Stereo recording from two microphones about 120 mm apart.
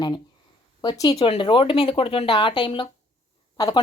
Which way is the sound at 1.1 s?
50° left (ahead or behind).